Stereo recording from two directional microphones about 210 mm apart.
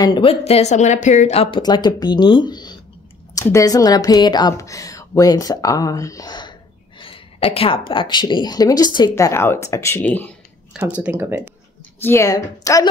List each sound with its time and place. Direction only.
0.0 s speech: 25° left (ahead or behind); by 10.3 s 10° left (ahead or behind)
11.0 s speech: 10° right (ahead or behind)
12.0 s speech: 15° left (ahead or behind)